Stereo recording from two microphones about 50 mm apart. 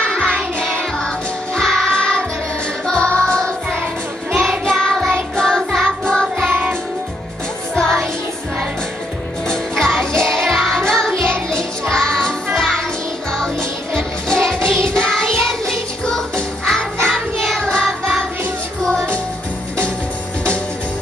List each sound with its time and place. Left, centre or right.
0.0 s music: centre
5.6 s music: centre
7.7 s music: centre
9.5 s music: centre